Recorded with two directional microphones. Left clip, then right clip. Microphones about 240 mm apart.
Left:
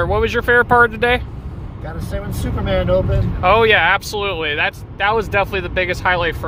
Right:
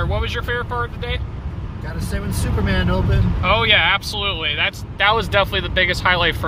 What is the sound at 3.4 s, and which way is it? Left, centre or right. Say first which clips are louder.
Speech: left 3 dB; left.